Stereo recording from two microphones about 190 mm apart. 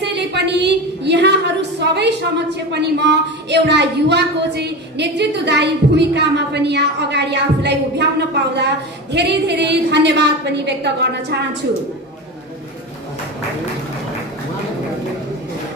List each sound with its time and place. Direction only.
0.0 s a woman's voice: 65° right (ahead or behind)
9.1 s a woman's voice: 60° right (ahead or behind)